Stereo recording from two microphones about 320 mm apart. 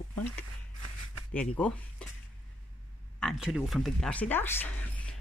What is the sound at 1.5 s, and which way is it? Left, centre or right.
Speech, centre.